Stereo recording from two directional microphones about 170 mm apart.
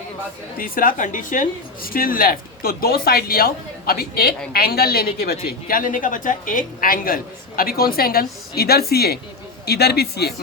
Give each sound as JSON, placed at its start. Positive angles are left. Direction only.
{"t": 0.6, "sound": "a woman's voice", "side_deg": 55}